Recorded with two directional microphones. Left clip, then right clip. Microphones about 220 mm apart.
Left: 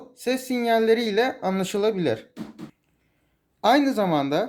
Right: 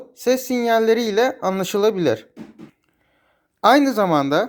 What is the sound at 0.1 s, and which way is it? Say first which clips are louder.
Speech: right 7 dB; 30° right (ahead or behind).